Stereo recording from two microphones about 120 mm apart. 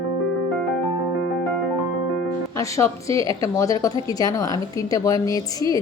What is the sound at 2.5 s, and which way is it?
Speech, 25° left (ahead or behind).